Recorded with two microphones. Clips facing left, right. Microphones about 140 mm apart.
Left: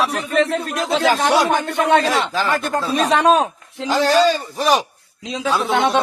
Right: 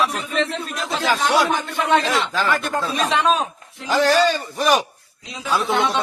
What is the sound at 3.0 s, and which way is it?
Speech, 50° left (ahead or behind).